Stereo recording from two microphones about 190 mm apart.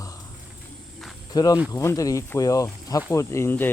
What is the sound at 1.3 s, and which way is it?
Speech, 20° left (ahead or behind).